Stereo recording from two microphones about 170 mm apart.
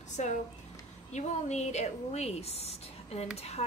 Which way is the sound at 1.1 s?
45° left (ahead or behind).